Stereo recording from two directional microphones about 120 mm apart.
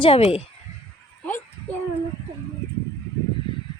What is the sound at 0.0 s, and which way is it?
Speech, 50° left (ahead or behind).